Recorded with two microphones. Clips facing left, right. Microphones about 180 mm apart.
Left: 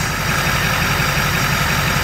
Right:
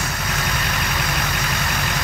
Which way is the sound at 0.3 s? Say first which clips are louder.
Left 4 dB; 60° left (ahead or behind).